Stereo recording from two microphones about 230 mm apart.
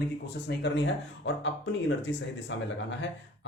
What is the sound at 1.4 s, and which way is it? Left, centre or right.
Speech, left.